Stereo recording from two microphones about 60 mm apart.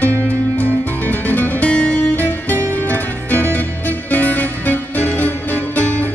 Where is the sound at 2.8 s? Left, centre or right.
Left.